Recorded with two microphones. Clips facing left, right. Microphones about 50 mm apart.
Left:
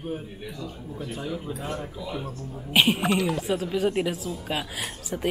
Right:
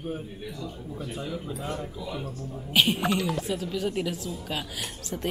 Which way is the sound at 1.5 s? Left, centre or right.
Left.